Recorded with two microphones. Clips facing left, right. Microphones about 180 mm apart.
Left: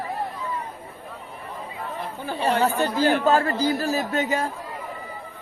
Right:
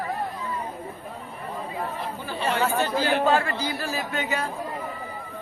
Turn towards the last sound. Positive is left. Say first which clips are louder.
# left 4 dB
turn(degrees=40)  # may be behind; listen again after turning